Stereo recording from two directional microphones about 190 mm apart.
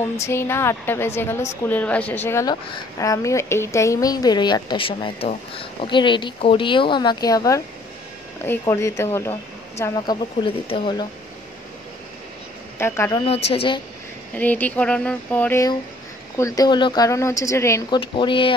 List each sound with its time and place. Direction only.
0.2 s a woman's voice: 15° left (ahead or behind)
10.4 s a woman's voice: 25° left (ahead or behind)
12.7 s a woman's voice: 15° left (ahead or behind)
13.5 s a woman's voice: 30° left (ahead or behind)
14.3 s a woman's voice: 10° left (ahead or behind); by 18.5 s 25° left (ahead or behind)